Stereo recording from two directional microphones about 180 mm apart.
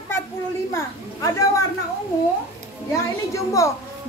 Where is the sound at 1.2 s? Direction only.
20° left (ahead or behind).